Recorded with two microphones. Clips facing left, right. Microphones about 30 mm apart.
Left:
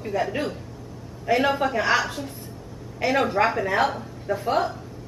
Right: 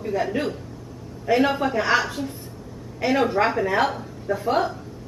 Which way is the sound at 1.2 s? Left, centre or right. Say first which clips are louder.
Right 1 dB; centre.